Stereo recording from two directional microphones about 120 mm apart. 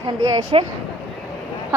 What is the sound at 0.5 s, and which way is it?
Speech, 50° right (ahead or behind).